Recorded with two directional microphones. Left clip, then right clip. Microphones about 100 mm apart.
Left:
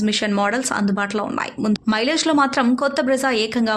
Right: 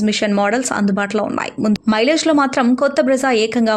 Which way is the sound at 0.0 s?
35° right (ahead or behind).